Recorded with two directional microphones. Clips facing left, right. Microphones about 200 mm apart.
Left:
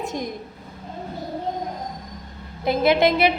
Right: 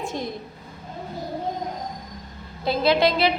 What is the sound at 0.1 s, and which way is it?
Speech, 15° left (ahead or behind).